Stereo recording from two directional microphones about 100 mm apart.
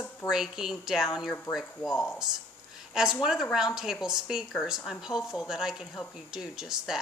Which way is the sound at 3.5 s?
5° right (ahead or behind).